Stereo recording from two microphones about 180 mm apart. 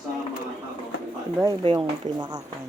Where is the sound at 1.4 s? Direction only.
30° right (ahead or behind).